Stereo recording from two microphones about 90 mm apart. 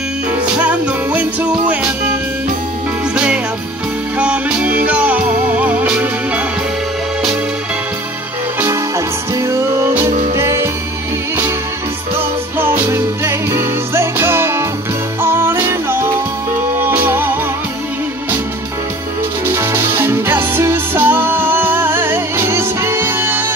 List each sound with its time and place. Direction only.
0.6 s music: 15° right (ahead or behind)
4.2 s music: 10° right (ahead or behind)
8.6 s music: 35° right (ahead or behind)
12.5 s music: 25° right (ahead or behind)
19.5 s music: 30° right (ahead or behind)